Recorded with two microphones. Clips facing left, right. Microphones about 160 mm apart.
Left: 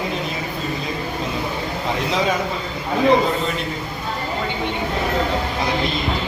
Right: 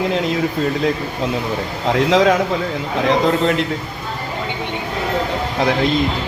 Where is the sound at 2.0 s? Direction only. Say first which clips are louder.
Right 8 dB; 90° right.